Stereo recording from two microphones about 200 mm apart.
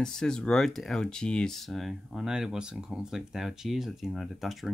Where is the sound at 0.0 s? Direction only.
5° left (ahead or behind).